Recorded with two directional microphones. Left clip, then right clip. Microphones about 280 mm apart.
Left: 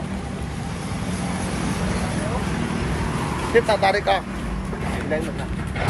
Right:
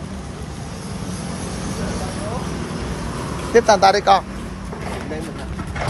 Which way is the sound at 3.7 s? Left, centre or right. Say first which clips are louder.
Right 6 dB; right.